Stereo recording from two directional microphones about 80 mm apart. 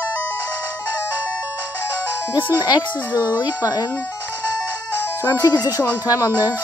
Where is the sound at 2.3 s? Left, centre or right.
Left.